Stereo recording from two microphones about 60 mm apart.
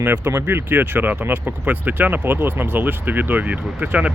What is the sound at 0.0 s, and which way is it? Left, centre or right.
Speech, right.